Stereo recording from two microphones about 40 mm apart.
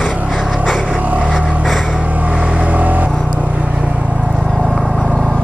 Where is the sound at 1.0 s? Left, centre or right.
Right.